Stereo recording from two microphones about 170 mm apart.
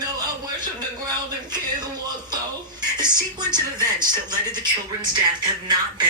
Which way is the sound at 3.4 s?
25° right (ahead or behind).